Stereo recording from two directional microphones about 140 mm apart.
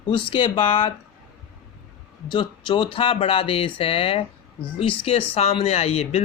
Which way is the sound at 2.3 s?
35° left (ahead or behind).